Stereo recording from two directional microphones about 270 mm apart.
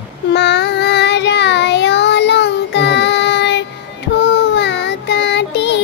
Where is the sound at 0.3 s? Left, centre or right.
Left.